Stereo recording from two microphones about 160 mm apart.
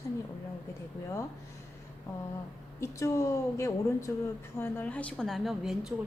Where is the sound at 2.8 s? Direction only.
20° left (ahead or behind).